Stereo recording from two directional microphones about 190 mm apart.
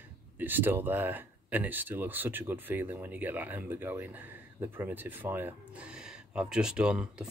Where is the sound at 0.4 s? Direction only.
10° right (ahead or behind).